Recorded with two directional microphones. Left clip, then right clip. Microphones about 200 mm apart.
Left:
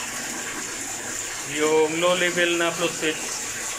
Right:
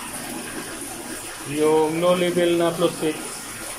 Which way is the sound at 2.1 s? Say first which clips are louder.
Right 1 dB; 15° right (ahead or behind).